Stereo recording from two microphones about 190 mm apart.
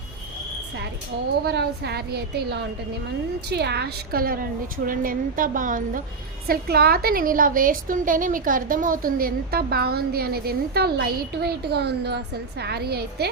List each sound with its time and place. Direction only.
1.5 s a woman's voice: 60° right (ahead or behind); by 6.0 s 45° right (ahead or behind)
6.5 s a woman's voice: 55° right (ahead or behind)